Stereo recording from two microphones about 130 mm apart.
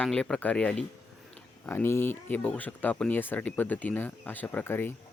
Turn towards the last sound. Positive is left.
turn(degrees=15)  # may be behind; listen again after turning